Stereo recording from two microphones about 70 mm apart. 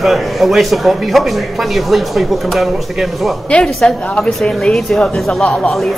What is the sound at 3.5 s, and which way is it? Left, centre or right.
Speech, centre.